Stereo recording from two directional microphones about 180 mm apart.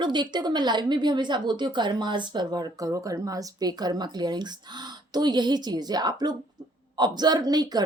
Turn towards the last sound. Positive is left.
turn(degrees=-20)  # may be behind; listen again after turning